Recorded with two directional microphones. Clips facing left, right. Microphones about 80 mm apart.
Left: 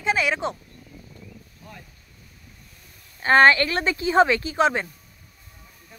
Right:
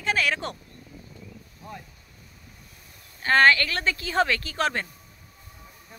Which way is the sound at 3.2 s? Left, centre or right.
Left.